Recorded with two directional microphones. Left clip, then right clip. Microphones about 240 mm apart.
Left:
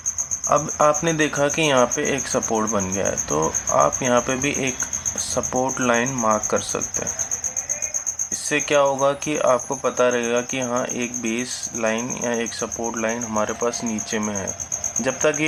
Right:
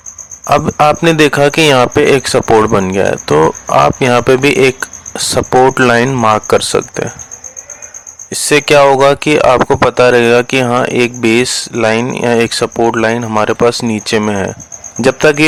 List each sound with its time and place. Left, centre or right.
0.4 s speech: right
8.4 s speech: right